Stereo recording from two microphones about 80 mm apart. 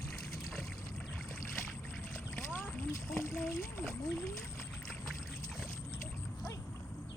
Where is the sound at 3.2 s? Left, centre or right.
Left.